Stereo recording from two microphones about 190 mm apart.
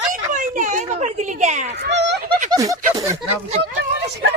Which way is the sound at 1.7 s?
60° right (ahead or behind).